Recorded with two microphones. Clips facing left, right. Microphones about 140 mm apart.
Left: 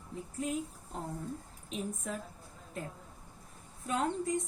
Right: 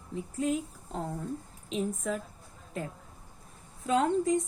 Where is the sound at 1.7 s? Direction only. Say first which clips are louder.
Right 7 dB; 90° right.